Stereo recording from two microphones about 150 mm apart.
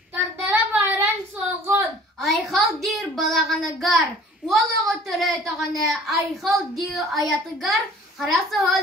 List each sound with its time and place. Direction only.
0.1 s child singing: 15° right (ahead or behind)
2.2 s child singing: centre (ahead or behind)
4.5 s a woman's voice: centre (ahead or behind)